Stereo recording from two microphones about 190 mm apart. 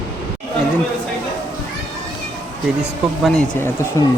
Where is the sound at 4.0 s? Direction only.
15° left (ahead or behind).